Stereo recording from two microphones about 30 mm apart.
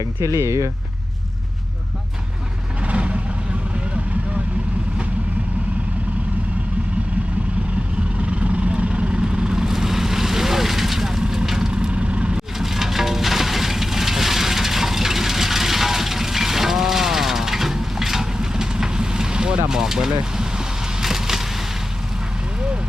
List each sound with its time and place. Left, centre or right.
2.8 s vehicle: right
8.2 s vehicle: right
9.6 s vehicle: centre
11.7 s vehicle: right
12.5 s music: centre
18.3 s vehicle: right
19.6 s speech: centre
21.0 s vehicle: centre